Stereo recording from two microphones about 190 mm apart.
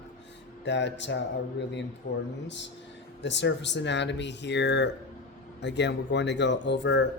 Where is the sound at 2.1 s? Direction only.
40° left (ahead or behind).